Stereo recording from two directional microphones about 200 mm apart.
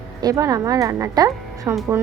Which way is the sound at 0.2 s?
20° right (ahead or behind).